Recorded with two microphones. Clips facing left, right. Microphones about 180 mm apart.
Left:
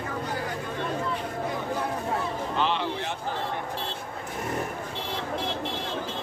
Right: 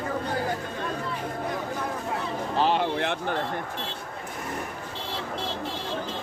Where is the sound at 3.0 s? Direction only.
65° right (ahead or behind).